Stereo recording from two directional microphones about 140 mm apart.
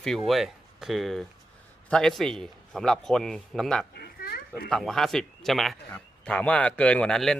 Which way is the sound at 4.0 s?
90° left.